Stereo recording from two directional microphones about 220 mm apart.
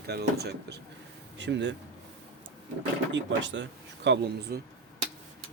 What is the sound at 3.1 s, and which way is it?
Speech, 55° right (ahead or behind).